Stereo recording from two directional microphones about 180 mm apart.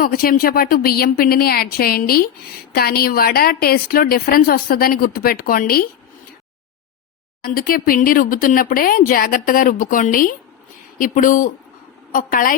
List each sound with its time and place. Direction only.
0.0 s a woman's voice: 55° left (ahead or behind)
7.4 s speech: 55° left (ahead or behind)